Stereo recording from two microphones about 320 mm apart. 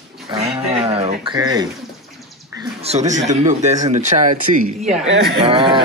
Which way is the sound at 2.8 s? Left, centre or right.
Right.